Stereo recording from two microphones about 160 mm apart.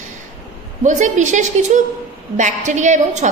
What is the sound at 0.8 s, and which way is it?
A woman's voice, 50° right (ahead or behind).